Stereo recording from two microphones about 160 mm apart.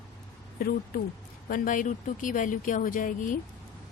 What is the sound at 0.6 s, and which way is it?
A woman's voice, 65° left (ahead or behind).